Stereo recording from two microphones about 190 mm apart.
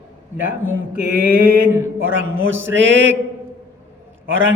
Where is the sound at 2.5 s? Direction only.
80° right.